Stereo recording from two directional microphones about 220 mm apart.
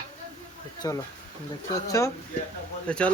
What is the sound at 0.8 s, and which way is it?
Speech, 15° left (ahead or behind).